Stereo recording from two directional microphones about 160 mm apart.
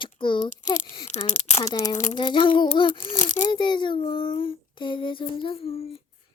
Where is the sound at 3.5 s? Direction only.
30° left (ahead or behind).